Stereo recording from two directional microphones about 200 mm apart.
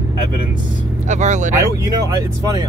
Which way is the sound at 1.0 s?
35° right (ahead or behind).